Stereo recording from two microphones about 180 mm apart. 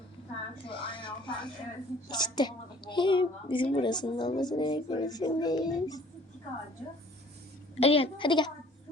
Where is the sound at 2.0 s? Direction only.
25° left (ahead or behind).